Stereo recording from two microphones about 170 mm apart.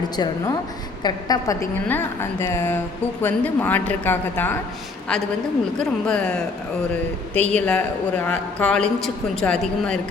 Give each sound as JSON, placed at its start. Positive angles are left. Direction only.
{"t": 0.2, "sound": "a woman's voice", "side_deg": 25}
{"t": 5.8, "sound": "a woman's voice", "side_deg": 5}